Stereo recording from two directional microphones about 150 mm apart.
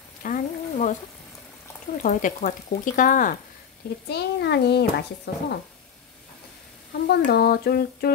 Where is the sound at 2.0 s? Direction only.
60° left (ahead or behind).